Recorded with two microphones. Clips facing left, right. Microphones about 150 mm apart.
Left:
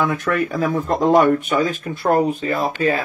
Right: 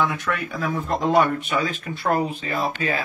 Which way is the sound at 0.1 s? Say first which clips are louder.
Left 7 dB; 45° left (ahead or behind).